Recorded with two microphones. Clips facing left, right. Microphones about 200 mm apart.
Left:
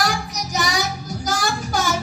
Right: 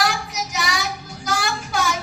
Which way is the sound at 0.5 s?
40° left (ahead or behind).